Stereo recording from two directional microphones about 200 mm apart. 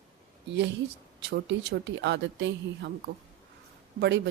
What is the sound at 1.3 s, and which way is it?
Speech, 60° right (ahead or behind).